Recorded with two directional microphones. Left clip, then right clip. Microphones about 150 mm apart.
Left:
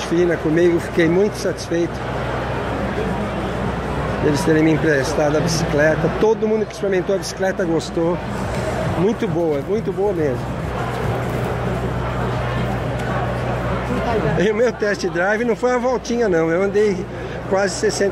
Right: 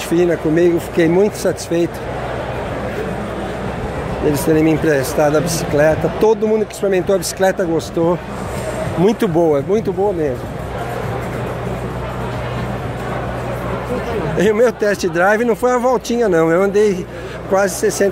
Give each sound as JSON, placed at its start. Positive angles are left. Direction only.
{"t": 0.1, "sound": "speech", "side_deg": -35}
{"t": 4.3, "sound": "speech", "side_deg": -30}
{"t": 6.9, "sound": "speech", "side_deg": -45}
{"t": 9.0, "sound": "speech", "side_deg": -50}
{"t": 14.4, "sound": "speech", "side_deg": -40}